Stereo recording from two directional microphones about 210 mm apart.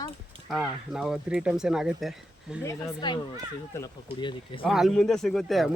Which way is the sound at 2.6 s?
20° left (ahead or behind).